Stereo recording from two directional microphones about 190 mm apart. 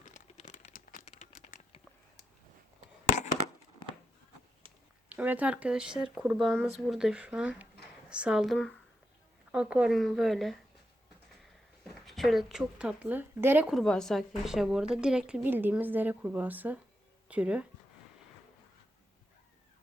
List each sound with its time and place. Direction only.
0.0 s a sound: 40° left (ahead or behind)
5.0 s speech: 10° right (ahead or behind)
12.0 s speech: centre (ahead or behind)